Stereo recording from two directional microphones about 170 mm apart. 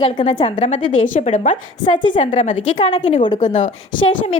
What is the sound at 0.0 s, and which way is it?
Speech, 30° left (ahead or behind).